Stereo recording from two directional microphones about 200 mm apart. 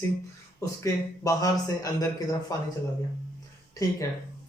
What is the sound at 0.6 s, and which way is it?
A man's voice, 15° left (ahead or behind).